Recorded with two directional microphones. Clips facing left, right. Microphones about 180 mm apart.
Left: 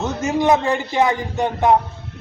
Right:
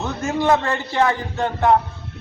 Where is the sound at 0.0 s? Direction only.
20° left (ahead or behind).